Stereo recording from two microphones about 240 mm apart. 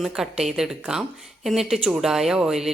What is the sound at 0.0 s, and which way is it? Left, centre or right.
Speech, centre.